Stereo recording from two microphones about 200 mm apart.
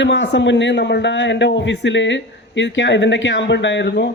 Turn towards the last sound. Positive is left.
turn(degrees=60)  # may be behind; listen again after turning